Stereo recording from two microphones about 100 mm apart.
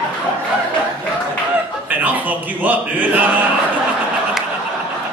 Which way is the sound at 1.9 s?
15° right (ahead or behind).